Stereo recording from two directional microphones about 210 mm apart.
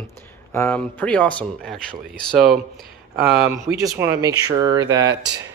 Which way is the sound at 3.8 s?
15° right (ahead or behind).